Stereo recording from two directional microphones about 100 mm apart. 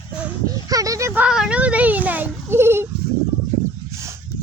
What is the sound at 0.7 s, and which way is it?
Speech, 35° right (ahead or behind).